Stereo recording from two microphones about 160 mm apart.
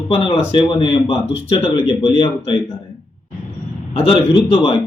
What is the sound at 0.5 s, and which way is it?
Speech, 30° left (ahead or behind).